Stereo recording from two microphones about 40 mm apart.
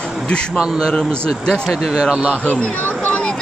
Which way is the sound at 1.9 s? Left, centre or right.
Centre.